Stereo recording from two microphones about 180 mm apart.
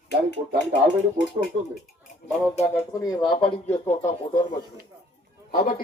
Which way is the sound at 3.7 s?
40° left (ahead or behind).